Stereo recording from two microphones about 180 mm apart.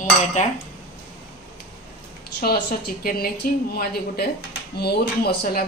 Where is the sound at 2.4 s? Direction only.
55° left (ahead or behind).